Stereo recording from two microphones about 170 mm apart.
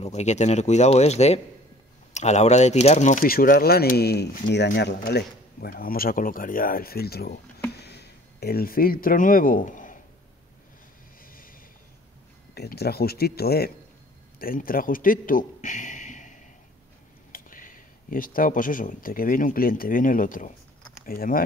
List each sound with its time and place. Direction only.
0.0 s speech: 40° left (ahead or behind); by 4.6 s 80° left
4.6 s speech: 65° left (ahead or behind)
11.2 s a sound: 55° left (ahead or behind)
12.5 s a man's voice: 70° left (ahead or behind)